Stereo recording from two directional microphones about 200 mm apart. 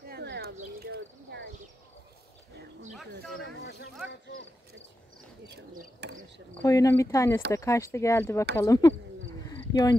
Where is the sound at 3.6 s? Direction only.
60° left (ahead or behind).